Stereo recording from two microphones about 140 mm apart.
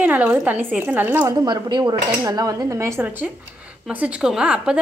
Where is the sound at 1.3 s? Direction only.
30° right (ahead or behind); by 3.3 s 15° right (ahead or behind).